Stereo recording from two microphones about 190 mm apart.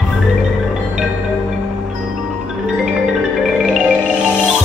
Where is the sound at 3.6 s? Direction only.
5° right (ahead or behind).